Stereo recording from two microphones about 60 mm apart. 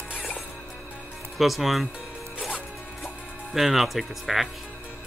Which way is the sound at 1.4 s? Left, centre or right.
Centre.